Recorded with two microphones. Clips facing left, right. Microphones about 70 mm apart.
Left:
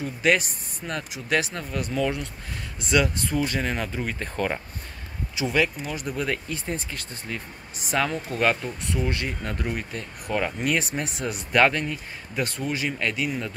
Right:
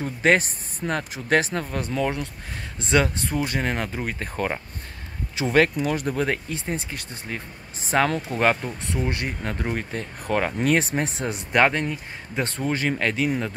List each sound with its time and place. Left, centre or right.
0.0 s speech: right; by 4.6 s centre
5.4 s speech: right